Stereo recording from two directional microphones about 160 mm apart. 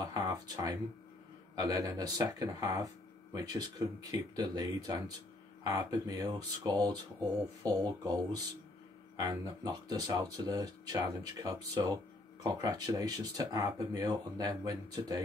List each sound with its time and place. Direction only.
0.0 s speech: 20° right (ahead or behind)